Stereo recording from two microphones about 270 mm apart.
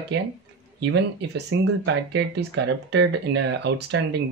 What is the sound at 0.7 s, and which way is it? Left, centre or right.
Speech, right.